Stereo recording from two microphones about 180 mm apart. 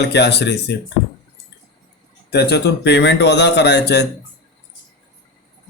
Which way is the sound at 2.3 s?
65° left (ahead or behind).